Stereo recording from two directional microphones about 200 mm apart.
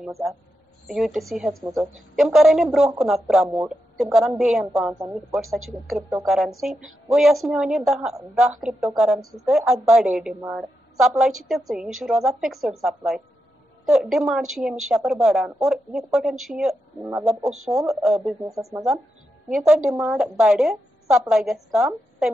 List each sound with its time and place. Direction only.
0.0 s a woman's voice: 5° right (ahead or behind)
18.4 s speech: 15° right (ahead or behind)
19.5 s a woman's voice: centre (ahead or behind)